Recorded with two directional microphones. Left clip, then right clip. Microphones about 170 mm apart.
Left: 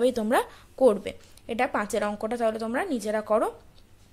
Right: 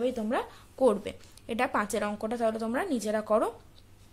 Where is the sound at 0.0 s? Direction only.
30° left (ahead or behind).